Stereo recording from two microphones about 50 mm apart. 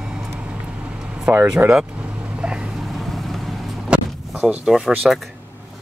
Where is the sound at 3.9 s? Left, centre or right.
Centre.